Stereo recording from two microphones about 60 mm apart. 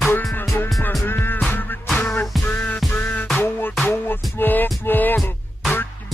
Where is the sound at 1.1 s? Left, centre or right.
Left.